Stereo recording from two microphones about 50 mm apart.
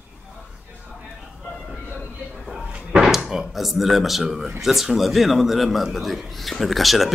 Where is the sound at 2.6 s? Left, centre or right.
Centre.